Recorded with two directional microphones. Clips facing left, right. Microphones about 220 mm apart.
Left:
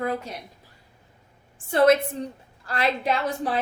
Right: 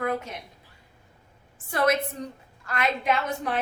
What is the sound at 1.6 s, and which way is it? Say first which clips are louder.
A woman's voice: left 6 dB; 30° left (ahead or behind).